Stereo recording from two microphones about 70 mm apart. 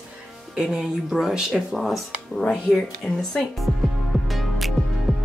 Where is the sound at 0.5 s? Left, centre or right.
Centre.